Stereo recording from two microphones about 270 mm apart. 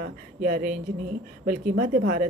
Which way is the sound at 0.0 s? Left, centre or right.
Right.